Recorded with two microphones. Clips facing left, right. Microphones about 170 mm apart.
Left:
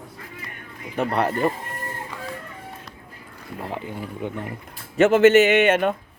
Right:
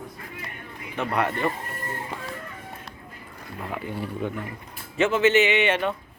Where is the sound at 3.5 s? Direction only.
30° left (ahead or behind).